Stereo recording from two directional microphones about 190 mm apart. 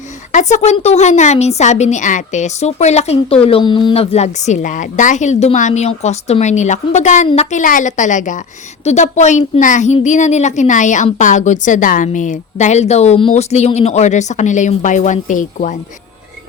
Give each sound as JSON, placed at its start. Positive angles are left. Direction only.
{"t": 0.3, "sound": "a woman's voice", "side_deg": 40}